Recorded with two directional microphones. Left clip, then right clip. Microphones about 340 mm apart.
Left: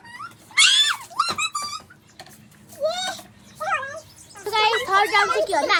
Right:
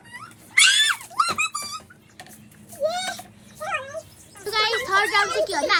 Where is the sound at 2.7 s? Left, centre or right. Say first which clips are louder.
Even; centre.